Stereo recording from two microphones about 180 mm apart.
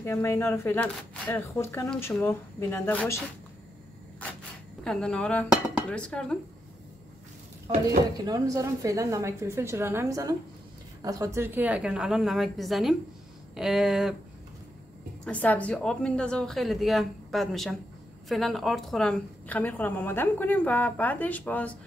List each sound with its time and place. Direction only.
0.0 s a woman's voice: 15° left (ahead or behind)
4.8 s a woman's voice: 5° left (ahead or behind)
8.3 s a woman's voice: 20° right (ahead or behind); by 14.1 s centre (ahead or behind)
15.2 s a woman's voice: 10° left (ahead or behind)